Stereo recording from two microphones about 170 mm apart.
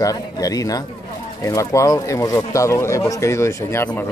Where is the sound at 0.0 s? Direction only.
20° left (ahead or behind).